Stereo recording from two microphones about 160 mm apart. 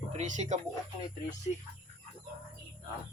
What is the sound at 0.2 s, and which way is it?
Speech, 45° right (ahead or behind).